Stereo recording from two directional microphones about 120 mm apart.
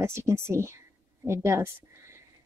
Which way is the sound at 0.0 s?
20° right (ahead or behind).